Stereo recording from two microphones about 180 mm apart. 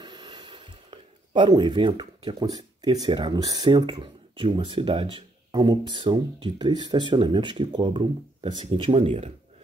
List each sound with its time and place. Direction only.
0.0 s speech: 25° right (ahead or behind)